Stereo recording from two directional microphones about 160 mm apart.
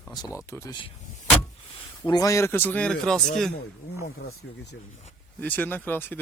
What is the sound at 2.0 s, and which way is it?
Speech, 25° left (ahead or behind).